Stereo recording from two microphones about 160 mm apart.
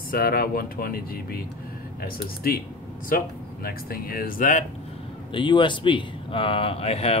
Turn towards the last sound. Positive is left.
turn(degrees=40)  # may be behind; listen again after turning